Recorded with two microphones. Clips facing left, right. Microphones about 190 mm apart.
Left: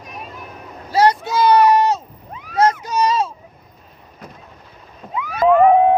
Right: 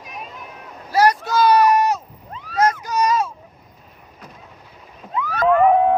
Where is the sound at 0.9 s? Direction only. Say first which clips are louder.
Left 1 dB; 25° left (ahead or behind).